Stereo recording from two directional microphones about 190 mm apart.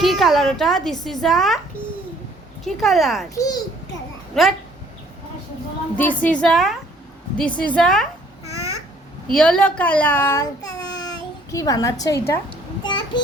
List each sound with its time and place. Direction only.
0.0 s a woman's voice: centre (ahead or behind)
2.8 s a woman's voice: centre (ahead or behind)
3.3 s a child's voice: 20° left (ahead or behind)
4.4 s a woman's voice: centre (ahead or behind)
6.0 s a woman's voice: 5° left (ahead or behind)
9.3 s a child's voice: 5° left (ahead or behind)
12.5 s child singing: 25° left (ahead or behind)